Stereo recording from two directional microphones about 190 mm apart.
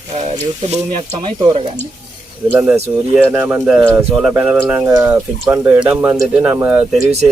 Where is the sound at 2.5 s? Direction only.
10° right (ahead or behind).